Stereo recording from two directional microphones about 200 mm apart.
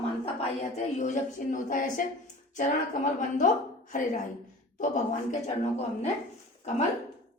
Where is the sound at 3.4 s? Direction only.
40° left (ahead or behind).